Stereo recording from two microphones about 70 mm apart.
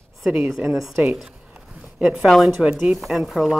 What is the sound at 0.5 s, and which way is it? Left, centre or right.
A woman's voice, centre.